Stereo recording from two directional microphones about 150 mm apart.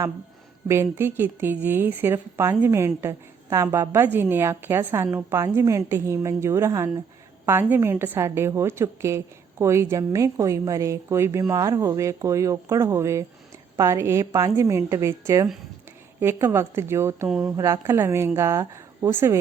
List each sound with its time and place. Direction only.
0.7 s a woman's voice: 15° right (ahead or behind)